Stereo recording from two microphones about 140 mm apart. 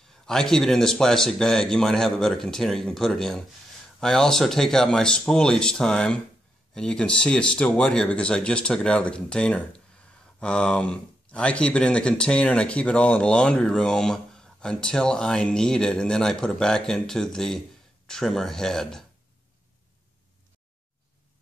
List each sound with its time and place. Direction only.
0.3 s speech: 5° left (ahead or behind)